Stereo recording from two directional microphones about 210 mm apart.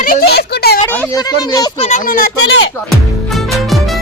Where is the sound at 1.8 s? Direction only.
35° left (ahead or behind).